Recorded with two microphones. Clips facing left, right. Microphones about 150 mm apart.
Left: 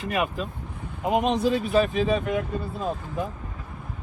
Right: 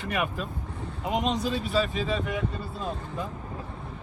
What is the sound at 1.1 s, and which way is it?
Speech, 55° left (ahead or behind).